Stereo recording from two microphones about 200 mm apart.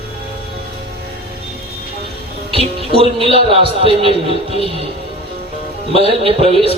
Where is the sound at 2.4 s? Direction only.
25° right (ahead or behind).